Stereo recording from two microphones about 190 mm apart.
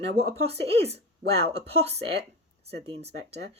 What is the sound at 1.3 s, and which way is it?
Speech, 60° right (ahead or behind).